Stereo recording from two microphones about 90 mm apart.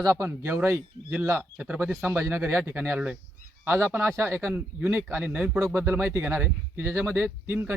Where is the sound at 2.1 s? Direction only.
25° right (ahead or behind).